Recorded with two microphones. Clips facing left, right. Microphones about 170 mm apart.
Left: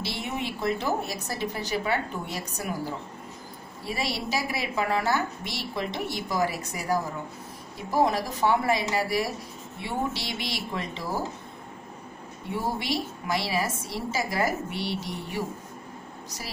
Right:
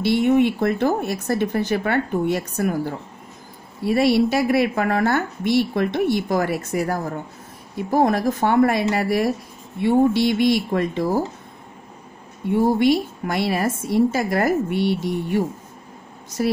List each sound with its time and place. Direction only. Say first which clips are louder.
0.0 s a woman's voice: right 15 dB; 55° right (ahead or behind)
12.4 s a woman's voice: right 13 dB; 55° right (ahead or behind)